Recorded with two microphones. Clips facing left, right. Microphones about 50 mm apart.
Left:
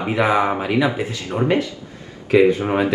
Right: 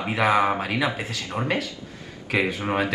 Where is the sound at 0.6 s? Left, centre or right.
Left.